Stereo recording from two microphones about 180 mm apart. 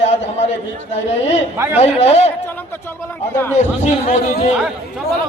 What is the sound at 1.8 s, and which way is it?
Speech, 35° left (ahead or behind).